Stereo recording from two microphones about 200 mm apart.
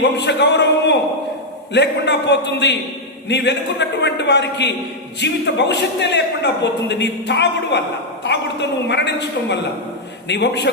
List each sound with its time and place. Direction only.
0.0 s a man's voice: 60° left (ahead or behind)
8.9 s a man's voice: 60° left (ahead or behind)